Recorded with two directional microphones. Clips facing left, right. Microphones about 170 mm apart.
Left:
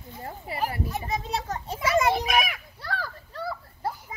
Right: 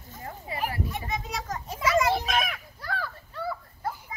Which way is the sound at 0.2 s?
30° left (ahead or behind).